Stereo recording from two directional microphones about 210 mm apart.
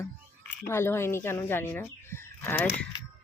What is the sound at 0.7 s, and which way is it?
A woman's voice, 10° left (ahead or behind).